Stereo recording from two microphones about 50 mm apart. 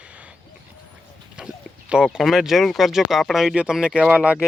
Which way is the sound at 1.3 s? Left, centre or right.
Centre.